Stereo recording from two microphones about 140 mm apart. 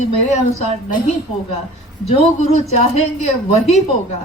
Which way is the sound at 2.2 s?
50° left (ahead or behind).